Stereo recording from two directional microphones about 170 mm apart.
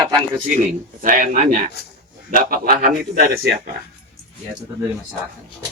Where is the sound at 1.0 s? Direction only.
50° right (ahead or behind).